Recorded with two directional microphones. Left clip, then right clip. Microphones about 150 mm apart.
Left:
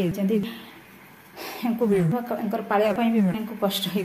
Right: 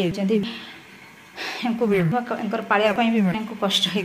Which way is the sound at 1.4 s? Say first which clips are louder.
Right 4 dB; centre (ahead or behind).